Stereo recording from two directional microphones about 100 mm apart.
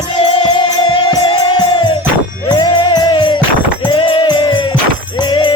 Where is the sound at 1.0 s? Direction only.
40° left (ahead or behind).